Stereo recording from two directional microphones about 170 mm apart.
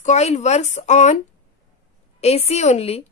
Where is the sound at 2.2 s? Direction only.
40° left (ahead or behind).